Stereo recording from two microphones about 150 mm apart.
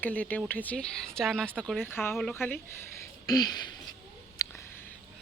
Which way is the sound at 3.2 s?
25° left (ahead or behind).